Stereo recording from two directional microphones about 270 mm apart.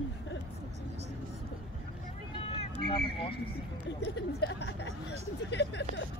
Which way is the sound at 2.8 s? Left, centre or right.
Centre.